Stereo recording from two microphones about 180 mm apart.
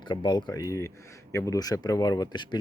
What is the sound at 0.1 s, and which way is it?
Speech, 25° left (ahead or behind).